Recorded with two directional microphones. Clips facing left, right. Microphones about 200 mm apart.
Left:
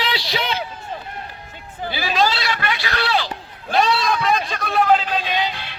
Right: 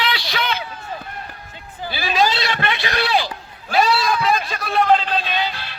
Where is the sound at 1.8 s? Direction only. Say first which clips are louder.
Left 2 dB; 15° left (ahead or behind).